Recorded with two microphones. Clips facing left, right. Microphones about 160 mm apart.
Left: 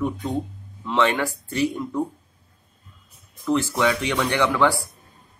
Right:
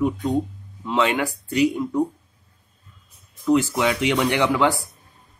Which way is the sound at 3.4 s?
15° right (ahead or behind).